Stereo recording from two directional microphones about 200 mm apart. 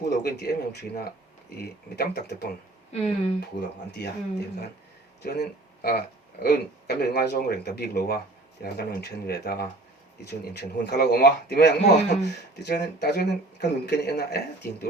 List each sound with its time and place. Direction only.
0.0 s speech: 55° left (ahead or behind)
2.9 s speech: 30° left (ahead or behind)
3.9 s speech: 55° left (ahead or behind)
11.8 s speech: 35° left (ahead or behind)
12.5 s speech: 55° left (ahead or behind)